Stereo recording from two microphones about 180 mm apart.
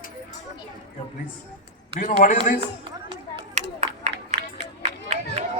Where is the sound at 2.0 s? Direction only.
45° left (ahead or behind).